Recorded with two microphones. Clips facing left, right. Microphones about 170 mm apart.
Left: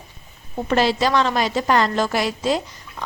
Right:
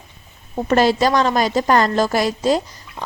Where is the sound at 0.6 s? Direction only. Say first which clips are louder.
Right 3 dB; 45° right (ahead or behind).